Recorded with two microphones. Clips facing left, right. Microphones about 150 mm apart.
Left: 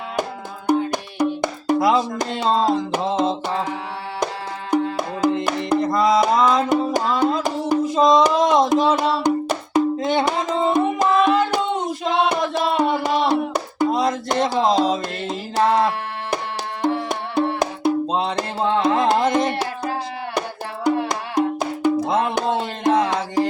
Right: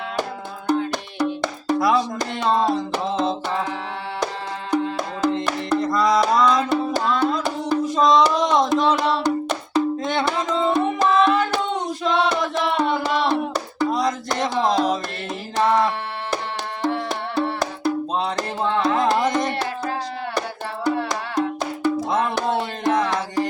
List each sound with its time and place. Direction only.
0.7 s music: 15° left (ahead or behind)
4.7 s music: 10° left (ahead or behind)
6.4 s music: 10° left (ahead or behind)
16.8 s music: 15° left (ahead or behind)